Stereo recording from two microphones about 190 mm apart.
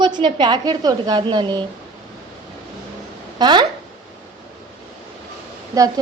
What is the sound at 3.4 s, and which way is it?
Speech, 25° right (ahead or behind).